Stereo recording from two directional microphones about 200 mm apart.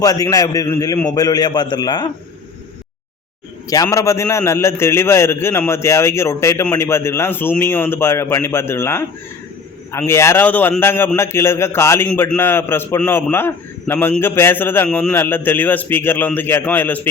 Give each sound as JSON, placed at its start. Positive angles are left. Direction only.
{"t": 0.0, "sound": "a man's voice", "side_deg": 20}
{"t": 3.7, "sound": "a man's voice", "side_deg": 15}